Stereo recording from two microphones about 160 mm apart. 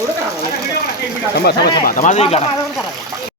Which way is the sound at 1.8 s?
55° left (ahead or behind).